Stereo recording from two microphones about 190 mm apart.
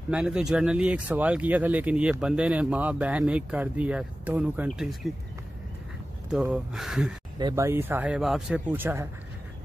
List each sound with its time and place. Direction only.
0.1 s speech: 5° right (ahead or behind)
6.3 s speech: 5° right (ahead or behind)
7.3 s speech: 20° right (ahead or behind)